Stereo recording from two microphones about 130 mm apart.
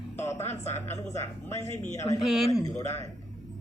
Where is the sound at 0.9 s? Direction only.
60° left (ahead or behind).